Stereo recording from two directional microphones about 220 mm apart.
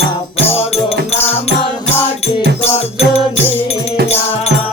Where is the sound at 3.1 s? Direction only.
25° left (ahead or behind).